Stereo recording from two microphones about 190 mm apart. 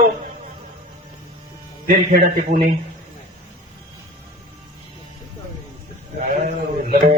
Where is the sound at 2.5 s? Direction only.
40° right (ahead or behind).